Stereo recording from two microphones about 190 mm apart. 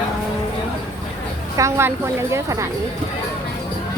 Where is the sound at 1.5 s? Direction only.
15° right (ahead or behind).